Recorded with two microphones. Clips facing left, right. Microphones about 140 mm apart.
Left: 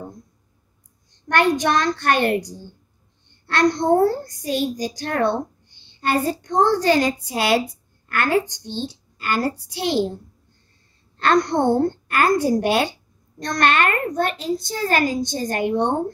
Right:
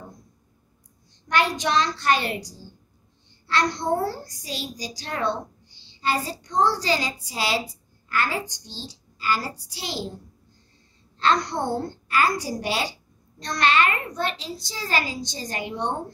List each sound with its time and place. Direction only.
1.3 s a woman's voice: 55° left (ahead or behind)
11.1 s a woman's voice: 55° left (ahead or behind)